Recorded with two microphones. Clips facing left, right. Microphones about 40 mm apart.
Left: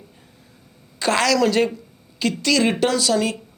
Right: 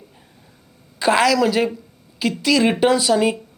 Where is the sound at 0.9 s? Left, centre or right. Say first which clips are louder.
Right 3 dB; centre.